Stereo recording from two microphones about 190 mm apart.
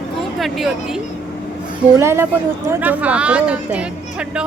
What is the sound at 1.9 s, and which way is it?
Speech, 15° right (ahead or behind).